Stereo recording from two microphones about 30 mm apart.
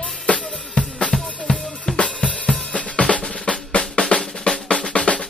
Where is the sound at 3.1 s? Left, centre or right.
Left.